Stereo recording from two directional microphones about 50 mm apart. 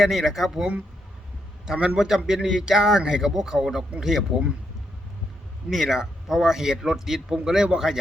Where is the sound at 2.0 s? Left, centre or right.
Centre.